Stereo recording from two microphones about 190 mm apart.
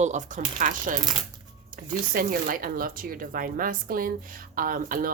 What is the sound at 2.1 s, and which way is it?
A woman's voice, 45° right (ahead or behind).